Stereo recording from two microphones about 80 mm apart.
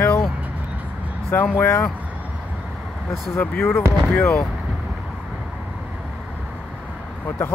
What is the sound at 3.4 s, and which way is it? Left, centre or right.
Speech, left.